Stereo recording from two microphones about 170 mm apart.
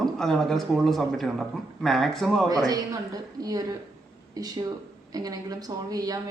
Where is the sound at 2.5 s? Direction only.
20° right (ahead or behind).